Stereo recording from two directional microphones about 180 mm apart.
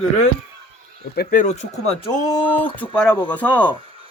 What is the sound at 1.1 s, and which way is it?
Speech, 55° left (ahead or behind).